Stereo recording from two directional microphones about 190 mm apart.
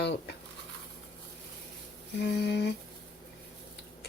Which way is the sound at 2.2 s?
60° left (ahead or behind).